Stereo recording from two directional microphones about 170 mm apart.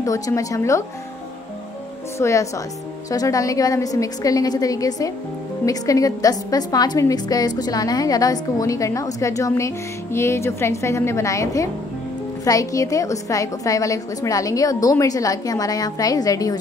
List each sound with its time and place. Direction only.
0.0 s a woman's voice: 20° left (ahead or behind)
2.1 s a woman's voice: 15° left (ahead or behind)